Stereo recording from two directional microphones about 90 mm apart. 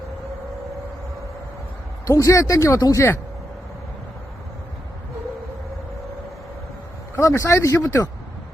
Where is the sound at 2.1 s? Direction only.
35° left (ahead or behind).